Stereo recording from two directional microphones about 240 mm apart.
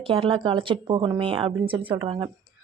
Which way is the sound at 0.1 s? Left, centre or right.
Right.